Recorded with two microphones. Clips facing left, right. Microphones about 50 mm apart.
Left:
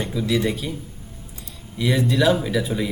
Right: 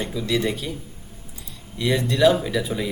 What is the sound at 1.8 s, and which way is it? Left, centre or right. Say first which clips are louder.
Speech: right 1 dB; centre.